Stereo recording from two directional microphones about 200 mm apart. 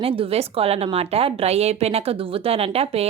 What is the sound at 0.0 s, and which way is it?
A woman's voice, 30° right (ahead or behind).